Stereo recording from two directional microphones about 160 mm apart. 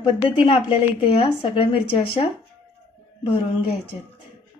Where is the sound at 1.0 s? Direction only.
35° left (ahead or behind).